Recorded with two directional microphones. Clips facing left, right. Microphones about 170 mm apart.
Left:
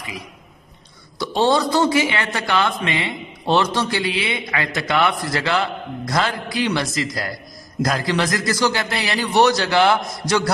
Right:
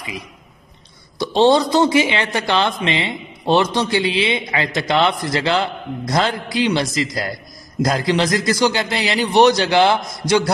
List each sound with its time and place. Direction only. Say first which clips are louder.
1.2 s a woman's voice: right 4 dB; 20° right (ahead or behind)